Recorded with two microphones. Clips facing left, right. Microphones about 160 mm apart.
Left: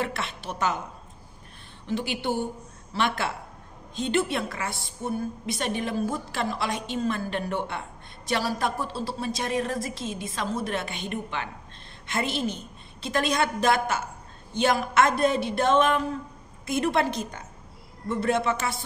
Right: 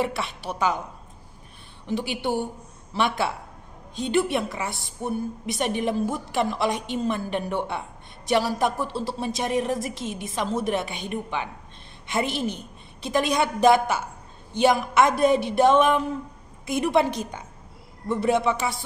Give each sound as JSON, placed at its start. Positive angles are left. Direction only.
{"t": 0.0, "sound": "a woman's voice", "side_deg": -15}
{"t": 1.9, "sound": "a woman's voice", "side_deg": -15}